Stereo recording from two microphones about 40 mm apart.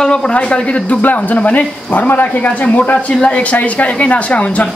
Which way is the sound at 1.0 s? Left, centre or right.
Left.